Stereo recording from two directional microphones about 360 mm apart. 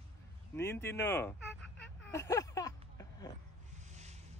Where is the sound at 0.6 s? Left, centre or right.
Centre.